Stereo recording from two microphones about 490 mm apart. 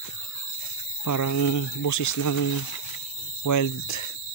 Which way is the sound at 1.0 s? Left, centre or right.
Left.